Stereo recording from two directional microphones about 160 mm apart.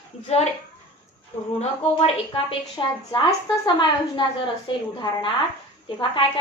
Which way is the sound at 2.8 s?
25° left (ahead or behind).